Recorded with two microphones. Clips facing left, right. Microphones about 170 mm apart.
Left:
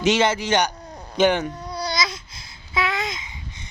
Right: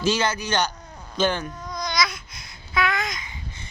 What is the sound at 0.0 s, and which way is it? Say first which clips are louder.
A man's voice: left 4 dB; 25° left (ahead or behind).